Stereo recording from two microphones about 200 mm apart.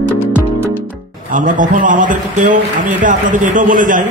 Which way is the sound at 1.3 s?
40° right (ahead or behind).